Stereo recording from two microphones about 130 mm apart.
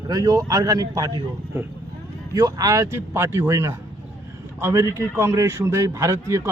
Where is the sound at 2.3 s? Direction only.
25° right (ahead or behind).